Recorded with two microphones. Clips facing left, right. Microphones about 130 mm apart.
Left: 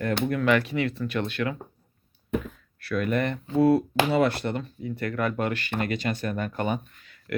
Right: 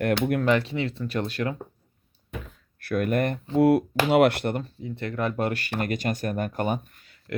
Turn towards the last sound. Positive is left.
turn(degrees=-45)  # may be behind; listen again after turning